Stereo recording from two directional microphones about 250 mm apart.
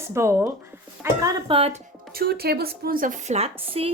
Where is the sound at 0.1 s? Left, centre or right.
Centre.